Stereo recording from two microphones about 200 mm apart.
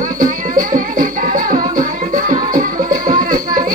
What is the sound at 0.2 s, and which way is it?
Music, 45° right (ahead or behind).